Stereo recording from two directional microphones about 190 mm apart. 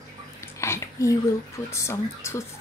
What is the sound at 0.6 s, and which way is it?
Speech, 15° left (ahead or behind).